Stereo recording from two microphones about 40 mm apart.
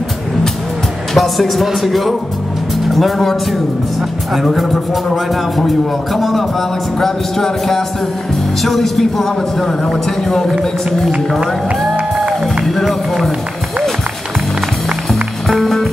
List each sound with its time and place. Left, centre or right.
1.1 s speech: centre
4.5 s speech: centre
12.6 s speech: centre
15.6 s music: centre